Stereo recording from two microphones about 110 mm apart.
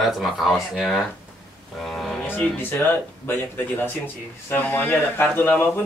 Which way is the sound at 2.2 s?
20° left (ahead or behind).